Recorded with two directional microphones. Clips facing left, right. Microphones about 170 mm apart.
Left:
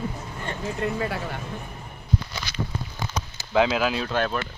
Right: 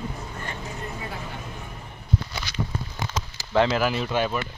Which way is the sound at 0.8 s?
75° left (ahead or behind).